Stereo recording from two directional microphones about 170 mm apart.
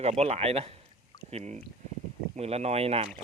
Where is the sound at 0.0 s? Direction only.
40° right (ahead or behind).